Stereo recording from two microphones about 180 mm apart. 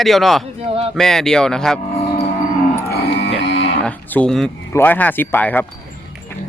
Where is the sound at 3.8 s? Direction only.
5° left (ahead or behind).